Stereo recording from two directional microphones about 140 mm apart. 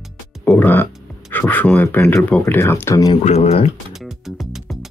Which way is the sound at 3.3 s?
45° left (ahead or behind).